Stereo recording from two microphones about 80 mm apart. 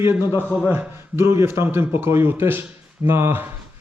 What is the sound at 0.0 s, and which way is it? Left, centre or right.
A man's voice, right.